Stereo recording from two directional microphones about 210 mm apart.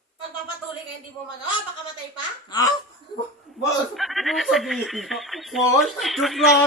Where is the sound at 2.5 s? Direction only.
20° left (ahead or behind).